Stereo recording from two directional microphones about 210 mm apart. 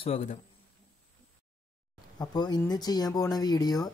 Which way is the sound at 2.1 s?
20° left (ahead or behind).